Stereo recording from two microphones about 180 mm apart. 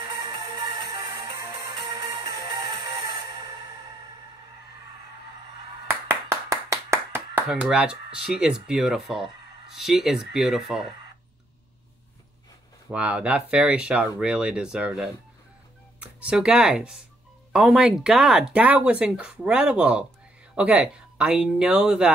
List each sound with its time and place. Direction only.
0.8 s music: 20° right (ahead or behind)
5.9 s clapping: 15° right (ahead or behind)
7.4 s speech: 5° right (ahead or behind)
12.9 s speech: 5° right (ahead or behind)